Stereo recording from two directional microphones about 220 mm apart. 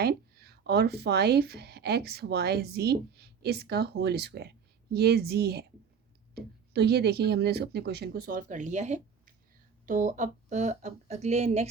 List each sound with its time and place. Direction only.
0.0 s speech: 45° right (ahead or behind); by 11.7 s 30° right (ahead or behind)